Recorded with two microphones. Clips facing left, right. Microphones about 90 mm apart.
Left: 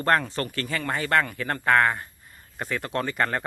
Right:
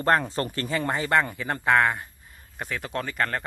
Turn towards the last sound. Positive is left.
turn(degrees=5)  # may be behind; listen again after turning